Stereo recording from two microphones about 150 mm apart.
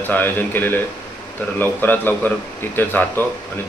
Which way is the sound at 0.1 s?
10° left (ahead or behind).